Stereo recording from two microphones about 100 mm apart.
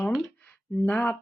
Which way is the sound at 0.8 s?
20° left (ahead or behind).